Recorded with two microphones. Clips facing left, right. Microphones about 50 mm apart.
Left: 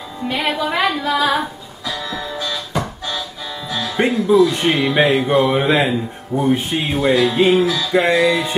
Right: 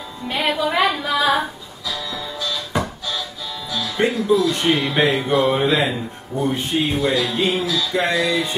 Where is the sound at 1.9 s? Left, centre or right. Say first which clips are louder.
Left 3 dB; left.